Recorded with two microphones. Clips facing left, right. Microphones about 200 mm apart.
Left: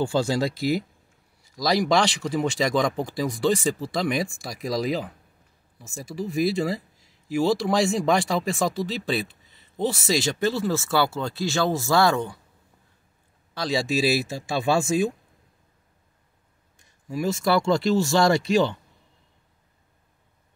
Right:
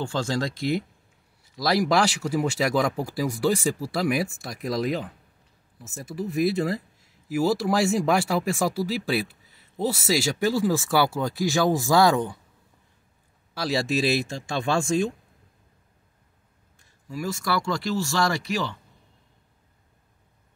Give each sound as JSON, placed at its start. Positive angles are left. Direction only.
{"t": 0.0, "sound": "speech", "side_deg": 10}
{"t": 13.6, "sound": "speech", "side_deg": 0}
{"t": 16.7, "sound": "speech", "side_deg": 20}